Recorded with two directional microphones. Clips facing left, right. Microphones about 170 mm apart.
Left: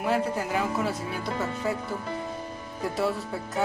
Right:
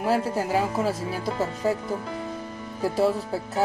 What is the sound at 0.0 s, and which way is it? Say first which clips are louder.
Speech: right 2 dB; 35° right (ahead or behind).